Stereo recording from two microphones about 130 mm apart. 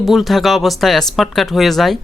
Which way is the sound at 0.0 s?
Centre (ahead or behind).